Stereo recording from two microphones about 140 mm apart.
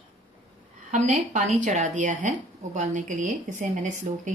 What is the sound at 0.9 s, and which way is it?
A woman's voice, 60° right (ahead or behind).